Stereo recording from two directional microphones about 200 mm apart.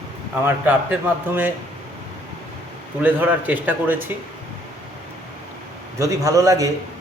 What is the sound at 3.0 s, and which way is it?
Speech, 10° right (ahead or behind).